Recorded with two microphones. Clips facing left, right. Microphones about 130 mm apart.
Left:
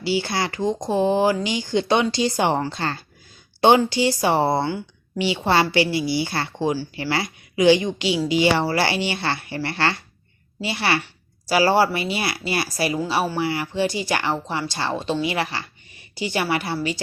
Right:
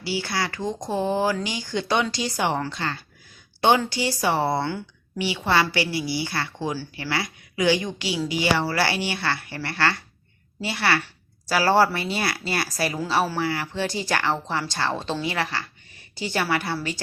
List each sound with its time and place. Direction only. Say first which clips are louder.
0.0 s speech: left 4 dB; 25° left (ahead or behind)
3.6 s speech: left 4 dB; 25° left (ahead or behind)